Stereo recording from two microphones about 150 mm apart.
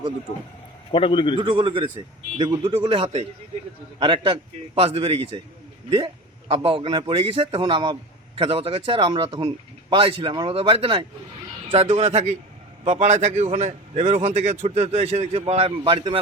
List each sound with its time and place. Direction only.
0.9 s a man's voice: 35° left (ahead or behind)
1.4 s a man's voice: 35° right (ahead or behind)
6.5 s a man's voice: 35° right (ahead or behind)